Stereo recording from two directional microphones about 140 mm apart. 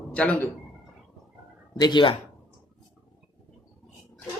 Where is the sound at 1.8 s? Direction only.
30° left (ahead or behind).